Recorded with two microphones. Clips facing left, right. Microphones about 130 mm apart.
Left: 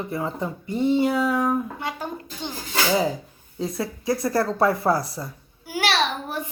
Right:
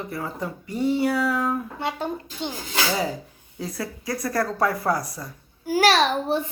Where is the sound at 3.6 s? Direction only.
25° left (ahead or behind).